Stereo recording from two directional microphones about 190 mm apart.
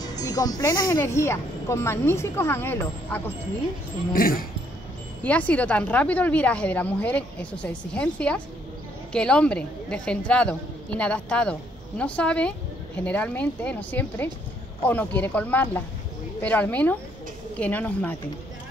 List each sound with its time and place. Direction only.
0.0 s music: 20° left (ahead or behind)
0.8 s a woman's voice: 15° left (ahead or behind)
4.1 s speech: 50° left (ahead or behind)
5.2 s a woman's voice: 10° left (ahead or behind)